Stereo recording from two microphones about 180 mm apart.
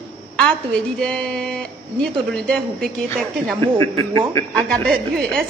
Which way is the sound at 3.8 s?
15° left (ahead or behind).